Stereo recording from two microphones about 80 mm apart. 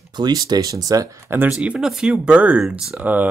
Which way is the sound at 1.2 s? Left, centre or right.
Right.